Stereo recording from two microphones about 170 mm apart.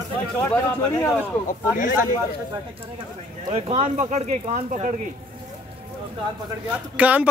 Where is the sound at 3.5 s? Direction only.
40° right (ahead or behind).